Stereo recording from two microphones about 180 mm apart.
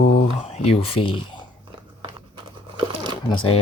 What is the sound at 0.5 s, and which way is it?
Speech, 30° left (ahead or behind).